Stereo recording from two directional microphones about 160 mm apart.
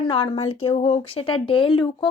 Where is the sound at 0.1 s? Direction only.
35° left (ahead or behind).